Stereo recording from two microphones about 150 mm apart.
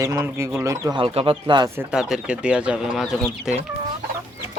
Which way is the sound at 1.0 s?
35° right (ahead or behind).